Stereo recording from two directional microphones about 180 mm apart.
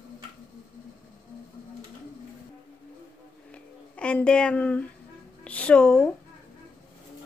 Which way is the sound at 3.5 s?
5° left (ahead or behind).